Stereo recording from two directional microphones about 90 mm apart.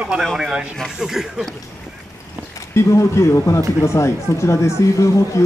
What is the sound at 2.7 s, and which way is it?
Speech, 35° left (ahead or behind).